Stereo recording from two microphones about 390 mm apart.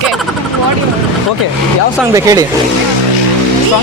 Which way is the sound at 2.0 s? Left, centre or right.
Centre.